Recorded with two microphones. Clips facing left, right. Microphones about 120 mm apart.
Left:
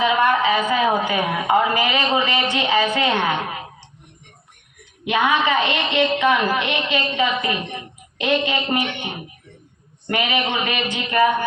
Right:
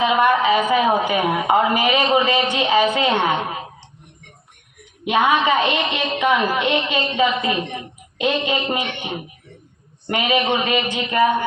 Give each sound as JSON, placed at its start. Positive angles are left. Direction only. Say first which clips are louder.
{"t": 0.0, "sound": "a woman's voice", "louder": "right 1 dB", "side_deg": -20}
{"t": 5.0, "sound": "a woman's voice", "louder": "right 2 dB", "side_deg": -25}
{"t": 10.1, "sound": "a woman's voice", "louder": "right 3 dB", "side_deg": -25}